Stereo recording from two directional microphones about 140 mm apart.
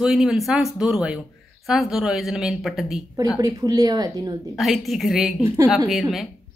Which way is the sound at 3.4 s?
25° right (ahead or behind).